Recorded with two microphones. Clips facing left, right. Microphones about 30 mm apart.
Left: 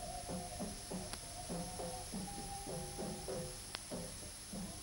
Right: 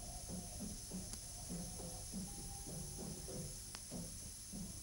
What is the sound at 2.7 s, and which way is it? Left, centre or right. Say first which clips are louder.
Music: left 5 dB; left.